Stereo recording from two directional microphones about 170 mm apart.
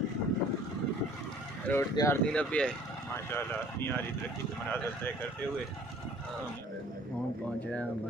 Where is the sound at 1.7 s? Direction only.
15° left (ahead or behind).